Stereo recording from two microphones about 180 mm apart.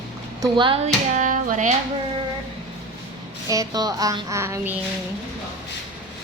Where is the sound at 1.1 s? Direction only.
45° right (ahead or behind).